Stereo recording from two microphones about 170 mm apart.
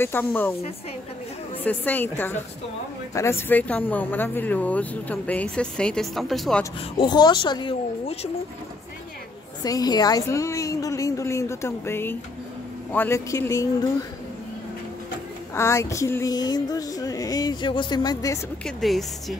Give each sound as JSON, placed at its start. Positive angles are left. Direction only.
{"t": 0.0, "sound": "speech", "side_deg": 10}
{"t": 1.6, "sound": "speech", "side_deg": 10}
{"t": 6.6, "sound": "a sound", "side_deg": 25}
{"t": 9.6, "sound": "speech", "side_deg": 20}
{"t": 15.5, "sound": "a sound", "side_deg": 15}
{"t": 18.8, "sound": "a woman's voice", "side_deg": 0}